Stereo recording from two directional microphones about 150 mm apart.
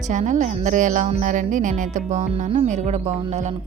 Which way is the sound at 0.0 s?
55° right (ahead or behind).